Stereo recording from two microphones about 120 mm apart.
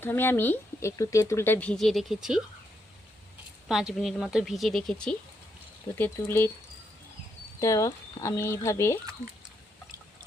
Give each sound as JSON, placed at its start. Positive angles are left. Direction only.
{"t": 0.0, "sound": "speech", "side_deg": 20}
{"t": 1.8, "sound": "a woman's voice", "side_deg": 0}
{"t": 3.7, "sound": "a woman's voice", "side_deg": -5}
{"t": 6.0, "sound": "speech", "side_deg": 20}
{"t": 7.6, "sound": "speech", "side_deg": 25}